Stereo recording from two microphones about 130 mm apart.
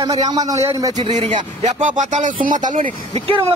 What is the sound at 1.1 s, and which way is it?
Speech, 65° right (ahead or behind).